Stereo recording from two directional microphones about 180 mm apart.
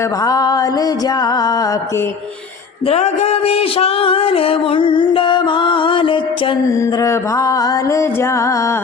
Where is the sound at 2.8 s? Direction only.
35° left (ahead or behind).